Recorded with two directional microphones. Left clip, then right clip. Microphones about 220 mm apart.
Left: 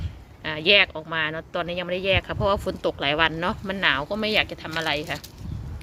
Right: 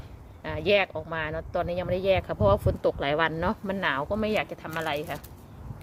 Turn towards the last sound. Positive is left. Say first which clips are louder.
# left 4 dB
turn(degrees=0)  # may be behind; listen again after turning